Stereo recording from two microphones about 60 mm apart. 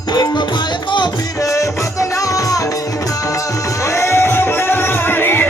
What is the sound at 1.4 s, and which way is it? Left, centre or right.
Music, left.